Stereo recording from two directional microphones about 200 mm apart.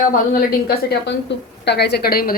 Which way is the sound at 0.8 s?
60° left (ahead or behind).